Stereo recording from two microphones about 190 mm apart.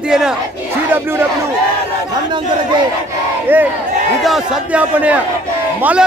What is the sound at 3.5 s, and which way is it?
A man's voice, 10° right (ahead or behind).